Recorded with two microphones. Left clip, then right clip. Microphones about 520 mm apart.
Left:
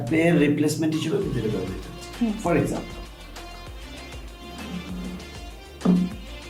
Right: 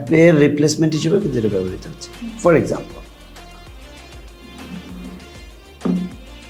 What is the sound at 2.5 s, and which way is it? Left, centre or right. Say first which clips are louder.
Speech: right 9 dB; right.